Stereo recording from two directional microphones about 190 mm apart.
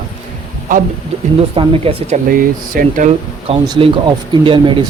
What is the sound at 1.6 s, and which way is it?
Speech, 30° right (ahead or behind).